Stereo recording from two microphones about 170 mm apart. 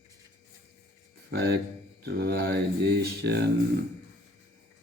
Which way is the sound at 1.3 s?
70° right (ahead or behind).